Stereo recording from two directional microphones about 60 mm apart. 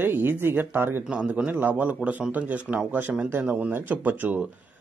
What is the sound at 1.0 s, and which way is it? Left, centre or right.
Speech, centre.